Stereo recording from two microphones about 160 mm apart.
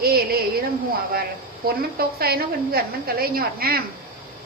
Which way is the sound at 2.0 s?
75° right (ahead or behind).